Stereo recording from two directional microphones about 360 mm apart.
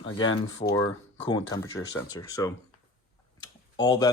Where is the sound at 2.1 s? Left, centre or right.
Centre.